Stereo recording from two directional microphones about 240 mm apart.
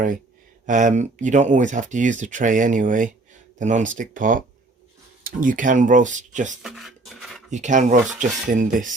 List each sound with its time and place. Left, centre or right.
0.6 s speech: right
6.6 s a sound: centre
7.5 s speech: right